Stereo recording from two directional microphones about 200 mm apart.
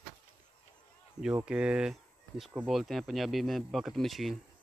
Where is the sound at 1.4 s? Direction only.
5° right (ahead or behind).